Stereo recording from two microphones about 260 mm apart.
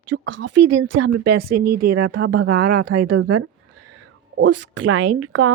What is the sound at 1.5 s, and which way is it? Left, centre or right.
Speech, right.